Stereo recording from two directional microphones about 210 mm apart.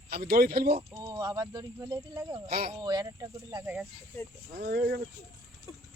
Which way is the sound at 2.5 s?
45° right (ahead or behind).